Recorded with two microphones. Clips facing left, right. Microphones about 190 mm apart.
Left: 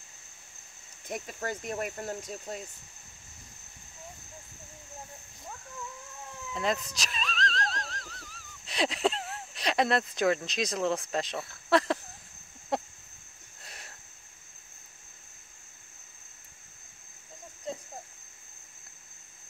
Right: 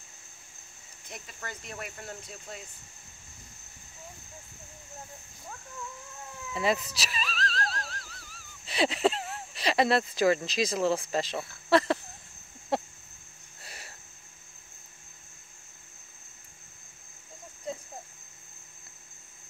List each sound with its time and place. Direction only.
1.0 s speech: 50° left (ahead or behind)
6.5 s speech: 5° right (ahead or behind)
12.7 s a sound: centre (ahead or behind)